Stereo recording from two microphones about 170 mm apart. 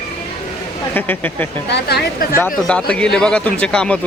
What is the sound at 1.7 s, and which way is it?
Speech, 75° left (ahead or behind).